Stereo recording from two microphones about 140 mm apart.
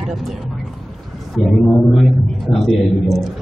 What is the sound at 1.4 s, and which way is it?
A man's voice, centre (ahead or behind).